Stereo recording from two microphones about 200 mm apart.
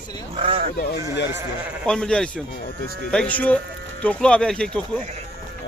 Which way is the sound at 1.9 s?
5° left (ahead or behind).